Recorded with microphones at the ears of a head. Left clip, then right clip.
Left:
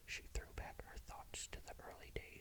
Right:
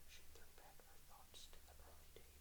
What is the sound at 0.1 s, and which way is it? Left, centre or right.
Whispering, left.